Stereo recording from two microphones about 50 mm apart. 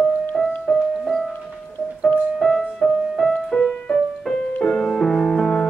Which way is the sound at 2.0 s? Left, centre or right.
Centre.